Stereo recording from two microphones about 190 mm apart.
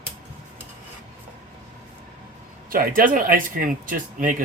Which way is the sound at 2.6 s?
50° right (ahead or behind).